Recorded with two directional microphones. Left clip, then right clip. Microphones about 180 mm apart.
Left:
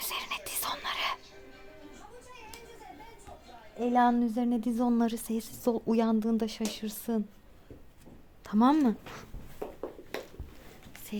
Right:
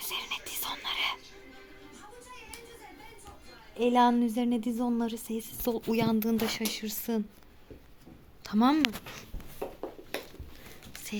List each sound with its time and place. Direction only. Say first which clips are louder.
0.0 s whispering: even; 20° left (ahead or behind)
3.8 s a woman's voice: right 1 dB; 5° left (ahead or behind)
8.4 s a woman's voice: left 1 dB; 15° left (ahead or behind)
10.1 s a sound: right 2 dB; 10° right (ahead or behind)